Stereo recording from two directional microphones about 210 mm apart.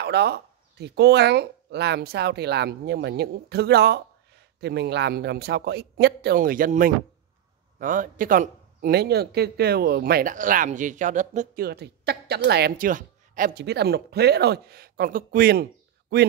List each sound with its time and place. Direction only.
0.0 s speech: 50° right (ahead or behind)